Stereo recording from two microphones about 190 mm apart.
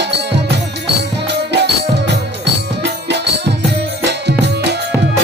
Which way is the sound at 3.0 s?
65° right (ahead or behind).